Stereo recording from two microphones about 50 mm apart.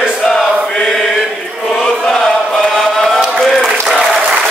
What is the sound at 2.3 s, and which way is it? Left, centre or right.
Chant, centre.